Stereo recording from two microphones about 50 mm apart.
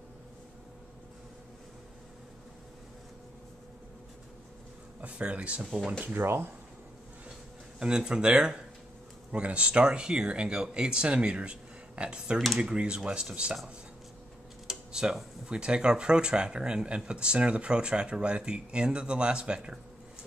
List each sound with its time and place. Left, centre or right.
5.0 s speech: right
6.1 s speech: right
7.8 s speech: centre
14.7 s a sound: centre
15.4 s speech: centre